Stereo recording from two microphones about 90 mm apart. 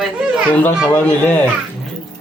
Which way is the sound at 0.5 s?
20° left (ahead or behind).